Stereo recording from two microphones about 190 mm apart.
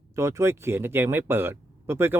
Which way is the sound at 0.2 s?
15° right (ahead or behind).